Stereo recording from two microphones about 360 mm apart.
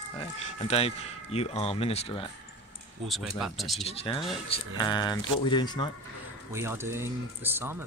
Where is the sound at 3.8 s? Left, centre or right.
Centre.